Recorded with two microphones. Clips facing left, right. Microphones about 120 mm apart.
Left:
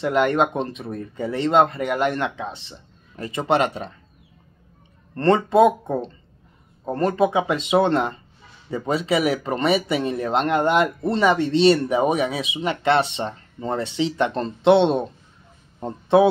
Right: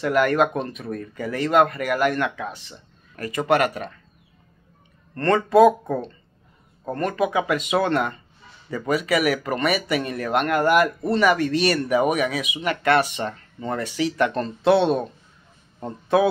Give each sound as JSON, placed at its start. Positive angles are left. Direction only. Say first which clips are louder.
{"t": 0.0, "sound": "speech", "louder": "even", "side_deg": 25}
{"t": 5.1, "sound": "speech", "louder": "even", "side_deg": 25}